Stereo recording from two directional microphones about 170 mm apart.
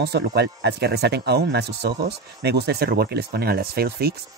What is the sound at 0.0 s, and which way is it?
Speech, 75° right (ahead or behind).